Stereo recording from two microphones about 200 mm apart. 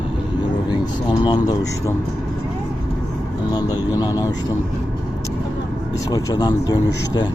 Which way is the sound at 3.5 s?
20° left (ahead or behind).